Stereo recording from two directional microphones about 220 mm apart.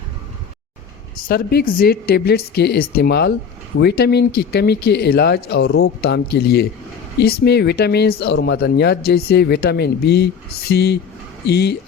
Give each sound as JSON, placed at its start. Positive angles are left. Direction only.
{"t": 1.1, "sound": "speech", "side_deg": 45}